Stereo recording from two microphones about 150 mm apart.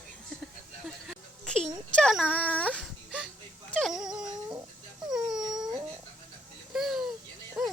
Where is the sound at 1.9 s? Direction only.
Centre (ahead or behind).